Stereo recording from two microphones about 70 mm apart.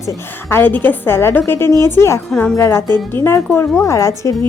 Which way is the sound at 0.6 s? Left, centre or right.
Left.